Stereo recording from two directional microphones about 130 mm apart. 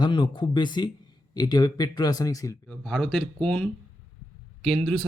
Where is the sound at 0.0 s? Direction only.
35° left (ahead or behind).